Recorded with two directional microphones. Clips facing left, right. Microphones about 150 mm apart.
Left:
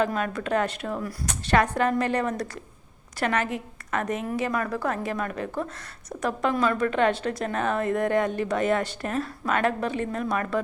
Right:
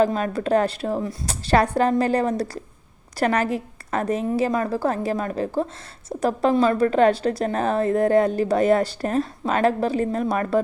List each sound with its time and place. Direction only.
0.0 s a woman's voice: 35° right (ahead or behind)